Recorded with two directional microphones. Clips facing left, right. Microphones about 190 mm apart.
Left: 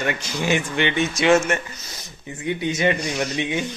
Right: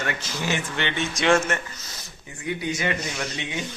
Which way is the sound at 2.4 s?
25° left (ahead or behind).